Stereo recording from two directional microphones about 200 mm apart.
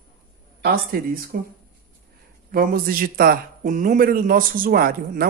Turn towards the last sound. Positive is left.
turn(degrees=-50)  # may be behind; listen again after turning